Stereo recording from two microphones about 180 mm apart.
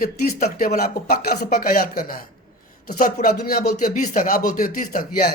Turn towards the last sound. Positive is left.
turn(degrees=55)  # may be behind; listen again after turning